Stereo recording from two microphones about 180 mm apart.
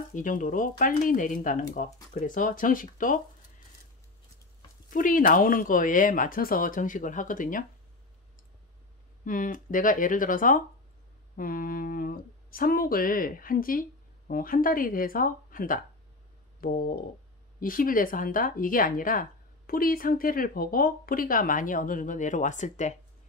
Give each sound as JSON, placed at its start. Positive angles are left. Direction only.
{"t": 0.1, "sound": "speech", "side_deg": 45}
{"t": 4.9, "sound": "speech", "side_deg": 50}
{"t": 9.2, "sound": "speech", "side_deg": 50}